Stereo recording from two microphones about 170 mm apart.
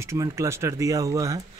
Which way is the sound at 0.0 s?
20° right (ahead or behind).